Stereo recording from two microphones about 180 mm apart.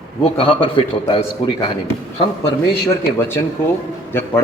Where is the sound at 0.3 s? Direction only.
30° left (ahead or behind).